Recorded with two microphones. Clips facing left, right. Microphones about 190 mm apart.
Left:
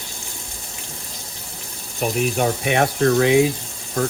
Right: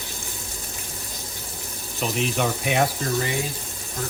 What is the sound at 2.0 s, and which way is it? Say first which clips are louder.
Speech: left 4 dB; 55° left (ahead or behind).